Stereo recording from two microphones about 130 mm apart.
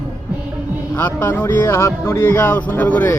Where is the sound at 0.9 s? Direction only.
15° left (ahead or behind).